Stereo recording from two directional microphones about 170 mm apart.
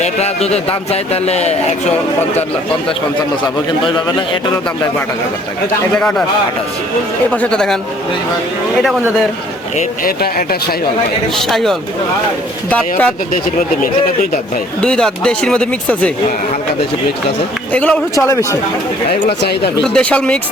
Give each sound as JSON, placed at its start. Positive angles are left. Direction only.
{"t": 0.0, "sound": "speech", "side_deg": 40}
{"t": 6.0, "sound": "speech", "side_deg": 5}
{"t": 7.3, "sound": "speech", "side_deg": 5}
{"t": 8.8, "sound": "speech", "side_deg": 0}
{"t": 9.7, "sound": "speech", "side_deg": 60}
{"t": 11.3, "sound": "speech", "side_deg": 0}
{"t": 14.8, "sound": "speech", "side_deg": 5}
{"t": 17.7, "sound": "speech", "side_deg": 5}
{"t": 19.4, "sound": "speech", "side_deg": 75}
{"t": 19.8, "sound": "speech", "side_deg": 5}